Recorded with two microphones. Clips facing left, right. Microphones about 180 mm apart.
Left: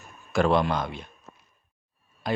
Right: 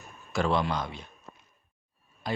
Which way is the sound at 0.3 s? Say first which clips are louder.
Left 5 dB; 55° left (ahead or behind).